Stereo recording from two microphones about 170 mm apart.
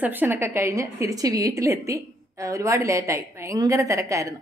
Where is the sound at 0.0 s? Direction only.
10° right (ahead or behind).